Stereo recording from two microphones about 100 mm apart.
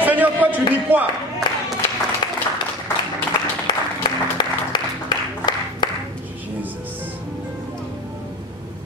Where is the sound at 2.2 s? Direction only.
55° left (ahead or behind).